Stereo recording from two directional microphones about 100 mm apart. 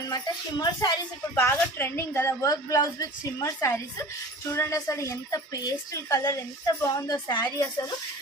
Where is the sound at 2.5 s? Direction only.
35° left (ahead or behind).